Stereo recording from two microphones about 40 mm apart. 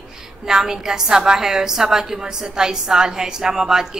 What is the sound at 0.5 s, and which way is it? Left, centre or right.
A woman's voice, centre.